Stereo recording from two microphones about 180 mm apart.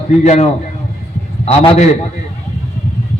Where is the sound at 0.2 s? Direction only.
40° left (ahead or behind).